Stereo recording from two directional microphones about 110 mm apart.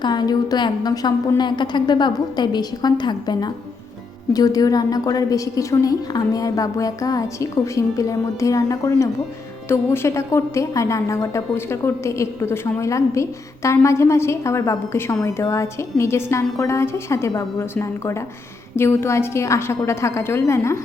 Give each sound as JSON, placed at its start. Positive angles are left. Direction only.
{"t": 0.0, "sound": "a woman's voice", "side_deg": 40}